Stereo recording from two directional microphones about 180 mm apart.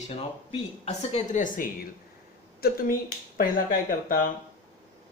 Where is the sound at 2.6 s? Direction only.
55° left (ahead or behind).